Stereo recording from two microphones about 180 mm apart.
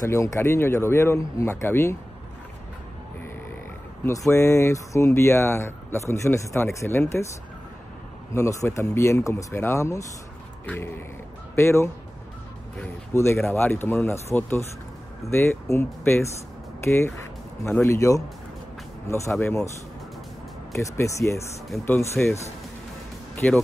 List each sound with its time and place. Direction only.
0.0 s speech: 15° left (ahead or behind)
4.3 s speech: 15° left (ahead or behind)
8.3 s speech: 15° left (ahead or behind)
11.5 s speech: 15° left (ahead or behind)
20.7 s speech: 15° left (ahead or behind)
23.3 s speech: 5° left (ahead or behind)